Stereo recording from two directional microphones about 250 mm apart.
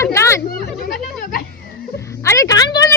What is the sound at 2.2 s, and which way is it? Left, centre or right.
Speech, centre.